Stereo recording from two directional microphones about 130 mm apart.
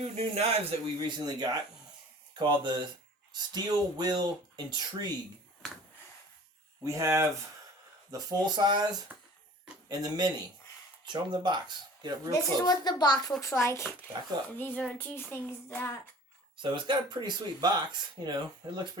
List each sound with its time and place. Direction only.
0.0 s a man's voice: 55° right (ahead or behind)
0.9 s speech: 30° right (ahead or behind)
6.8 s speech: 25° right (ahead or behind)
12.3 s speech: 30° left (ahead or behind)
14.6 s child singing: 10° left (ahead or behind)
16.6 s speech: 40° right (ahead or behind)